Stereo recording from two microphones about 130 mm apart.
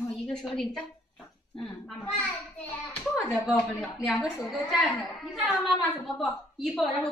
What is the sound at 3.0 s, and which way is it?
A woman's voice, 5° right (ahead or behind).